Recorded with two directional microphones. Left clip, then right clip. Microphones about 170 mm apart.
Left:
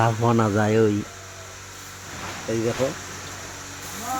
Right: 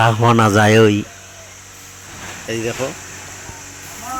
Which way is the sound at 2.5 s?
Centre (ahead or behind).